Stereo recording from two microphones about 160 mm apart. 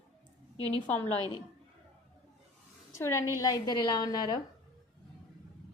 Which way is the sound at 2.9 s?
15° left (ahead or behind).